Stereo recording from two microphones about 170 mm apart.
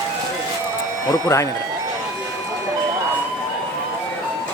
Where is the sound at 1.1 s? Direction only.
15° left (ahead or behind).